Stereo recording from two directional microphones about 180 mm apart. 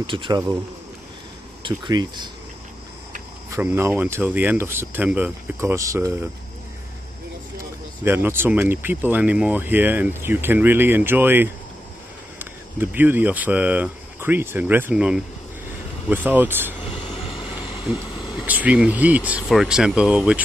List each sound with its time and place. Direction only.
0.0 s speech: 25° right (ahead or behind)
1.6 s speech: 25° right (ahead or behind)
3.4 s speech: 15° right (ahead or behind)
8.0 s speech: 10° right (ahead or behind)
16.8 s vehicle: 30° left (ahead or behind)
18.4 s speech: 5° right (ahead or behind)